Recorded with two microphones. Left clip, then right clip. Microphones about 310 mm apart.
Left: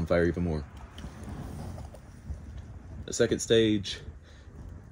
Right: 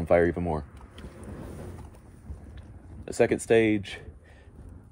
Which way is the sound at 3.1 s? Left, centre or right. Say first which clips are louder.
Right 3 dB; centre.